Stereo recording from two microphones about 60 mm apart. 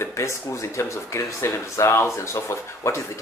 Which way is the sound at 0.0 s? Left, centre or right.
Left.